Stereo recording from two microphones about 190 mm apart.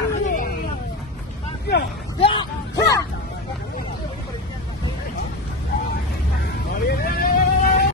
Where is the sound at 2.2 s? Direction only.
25° left (ahead or behind).